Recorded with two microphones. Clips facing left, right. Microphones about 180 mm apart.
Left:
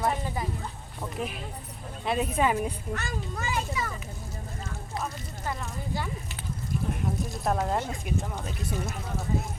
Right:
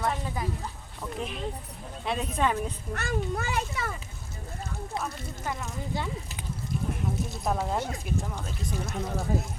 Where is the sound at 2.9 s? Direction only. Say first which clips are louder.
Right 4 dB; 60° right (ahead or behind).